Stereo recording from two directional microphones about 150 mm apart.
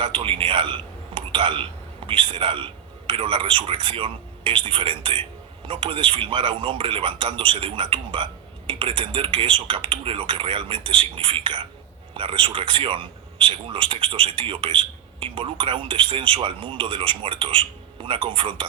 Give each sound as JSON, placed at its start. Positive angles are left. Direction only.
{"t": 0.0, "sound": "a man's voice", "side_deg": -35}